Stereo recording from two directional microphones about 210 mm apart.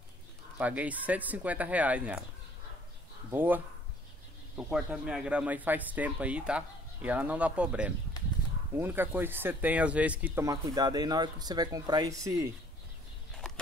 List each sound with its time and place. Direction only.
0.6 s speech: 5° right (ahead or behind)
3.3 s speech: 10° right (ahead or behind)
8.2 s a sound: 20° left (ahead or behind)
8.7 s speech: 10° right (ahead or behind)